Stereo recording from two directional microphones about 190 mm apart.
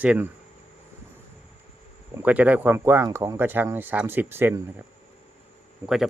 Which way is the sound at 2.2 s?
10° right (ahead or behind).